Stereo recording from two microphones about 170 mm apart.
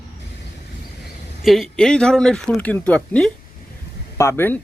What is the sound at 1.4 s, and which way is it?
Speech, centre (ahead or behind).